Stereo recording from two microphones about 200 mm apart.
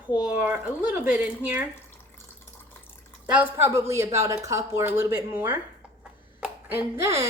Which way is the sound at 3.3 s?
10° right (ahead or behind).